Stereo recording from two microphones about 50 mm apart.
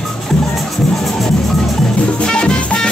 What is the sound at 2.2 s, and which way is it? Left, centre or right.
Music, centre.